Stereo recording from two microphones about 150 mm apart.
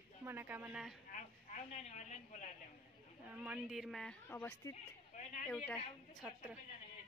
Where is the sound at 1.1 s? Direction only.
55° left (ahead or behind).